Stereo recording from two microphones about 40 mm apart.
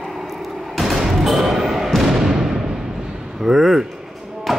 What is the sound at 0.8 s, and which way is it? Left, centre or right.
Music, centre.